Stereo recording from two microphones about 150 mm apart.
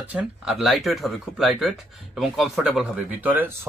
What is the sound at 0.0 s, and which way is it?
Speech, 10° right (ahead or behind).